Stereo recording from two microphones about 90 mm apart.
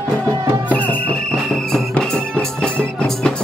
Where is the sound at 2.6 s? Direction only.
10° left (ahead or behind).